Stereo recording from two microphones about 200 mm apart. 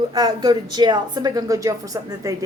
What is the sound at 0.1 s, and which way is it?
A woman's voice, 20° right (ahead or behind).